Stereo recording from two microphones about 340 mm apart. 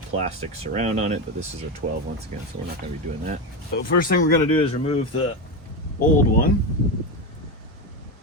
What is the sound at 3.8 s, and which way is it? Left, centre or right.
Speech, left.